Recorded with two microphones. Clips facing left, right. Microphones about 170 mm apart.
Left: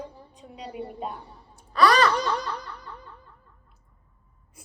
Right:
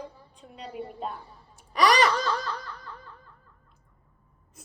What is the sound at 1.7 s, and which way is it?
Wail, 15° right (ahead or behind).